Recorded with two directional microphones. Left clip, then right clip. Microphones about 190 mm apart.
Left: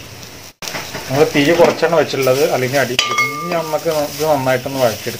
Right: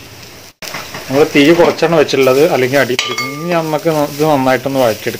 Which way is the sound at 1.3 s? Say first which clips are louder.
Right 3 dB; 55° right (ahead or behind).